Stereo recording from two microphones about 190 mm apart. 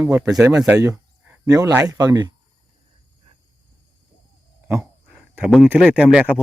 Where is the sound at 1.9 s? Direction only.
20° right (ahead or behind).